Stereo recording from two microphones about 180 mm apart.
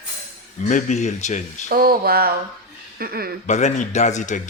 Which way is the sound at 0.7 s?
40° left (ahead or behind).